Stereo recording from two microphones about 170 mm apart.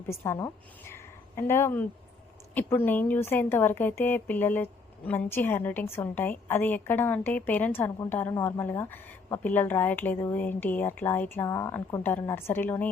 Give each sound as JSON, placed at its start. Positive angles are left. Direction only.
{"t": 0.1, "sound": "a woman's voice", "side_deg": 15}